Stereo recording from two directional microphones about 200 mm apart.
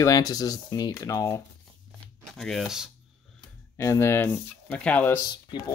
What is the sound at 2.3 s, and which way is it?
Speech, centre (ahead or behind).